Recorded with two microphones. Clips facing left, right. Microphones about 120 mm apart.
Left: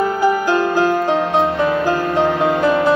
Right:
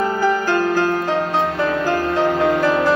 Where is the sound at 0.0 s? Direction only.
15° left (ahead or behind).